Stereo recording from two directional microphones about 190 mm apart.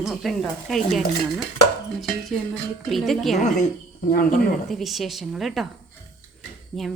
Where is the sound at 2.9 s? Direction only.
Centre (ahead or behind).